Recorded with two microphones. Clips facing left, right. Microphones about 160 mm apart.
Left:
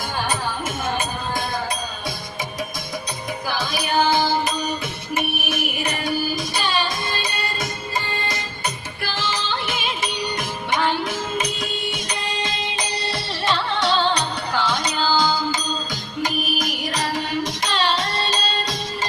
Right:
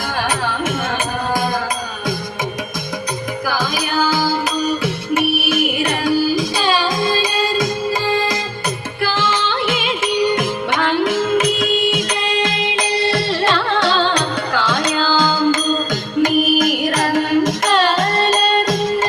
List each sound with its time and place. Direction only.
3.4 s music: 90° right
9.1 s music: 55° right (ahead or behind)
9.6 s music: 90° right
10.2 s music: 55° right (ahead or behind); by 11.3 s 90° right
11.3 s music: 50° right (ahead or behind)
14.5 s music: 90° right
16.2 s music: 50° right (ahead or behind)